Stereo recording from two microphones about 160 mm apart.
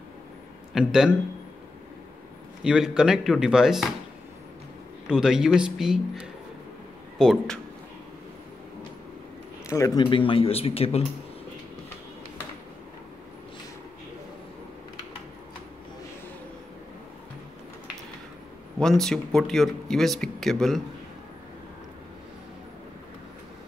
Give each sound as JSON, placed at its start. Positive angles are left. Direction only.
{"t": 0.7, "sound": "speech", "side_deg": -5}
{"t": 2.6, "sound": "speech", "side_deg": -5}
{"t": 5.0, "sound": "speech", "side_deg": -5}
{"t": 7.2, "sound": "speech", "side_deg": 0}
{"t": 9.7, "sound": "speech", "side_deg": 20}
{"t": 18.8, "sound": "speech", "side_deg": 5}